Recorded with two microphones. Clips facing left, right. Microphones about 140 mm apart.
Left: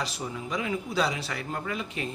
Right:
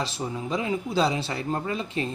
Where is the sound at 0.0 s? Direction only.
25° right (ahead or behind).